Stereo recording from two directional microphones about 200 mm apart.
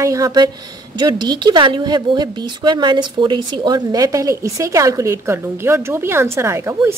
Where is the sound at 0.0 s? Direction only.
15° right (ahead or behind).